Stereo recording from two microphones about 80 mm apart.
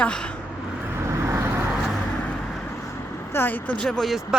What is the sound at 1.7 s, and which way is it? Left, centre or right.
Vehicle, centre.